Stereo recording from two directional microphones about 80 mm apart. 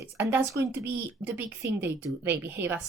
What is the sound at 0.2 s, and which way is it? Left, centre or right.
Speech, right.